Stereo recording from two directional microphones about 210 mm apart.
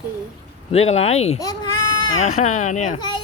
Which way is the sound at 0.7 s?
30° left (ahead or behind).